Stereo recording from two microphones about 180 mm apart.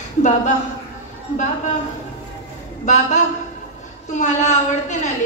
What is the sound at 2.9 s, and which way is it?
A woman's voice, 40° left (ahead or behind).